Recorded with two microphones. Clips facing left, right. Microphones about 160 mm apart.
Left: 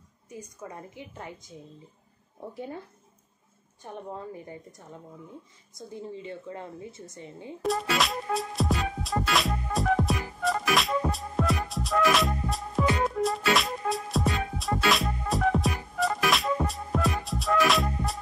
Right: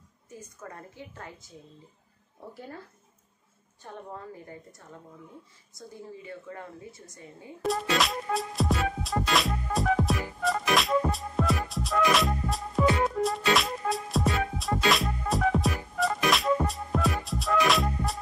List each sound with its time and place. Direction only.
0.3 s a woman's voice: 15° left (ahead or behind)
2.5 s a woman's voice: 20° left (ahead or behind)
3.8 s a woman's voice: 20° left (ahead or behind)
7.6 s music: centre (ahead or behind)